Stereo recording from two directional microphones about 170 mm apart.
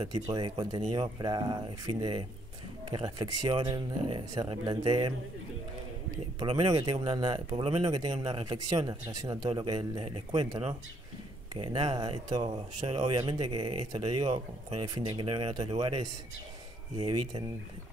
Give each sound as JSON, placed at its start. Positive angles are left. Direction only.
{"t": 0.0, "sound": "speech", "side_deg": -25}
{"t": 6.4, "sound": "speech", "side_deg": -30}
{"t": 17.0, "sound": "speech", "side_deg": -25}